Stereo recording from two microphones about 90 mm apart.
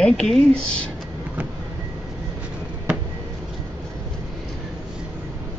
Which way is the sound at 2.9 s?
10° right (ahead or behind).